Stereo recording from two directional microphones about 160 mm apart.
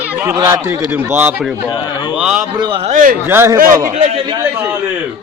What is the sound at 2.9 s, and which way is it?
Speech, 55° right (ahead or behind).